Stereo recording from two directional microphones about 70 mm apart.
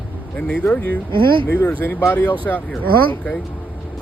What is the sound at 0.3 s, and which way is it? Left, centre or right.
Speech, centre.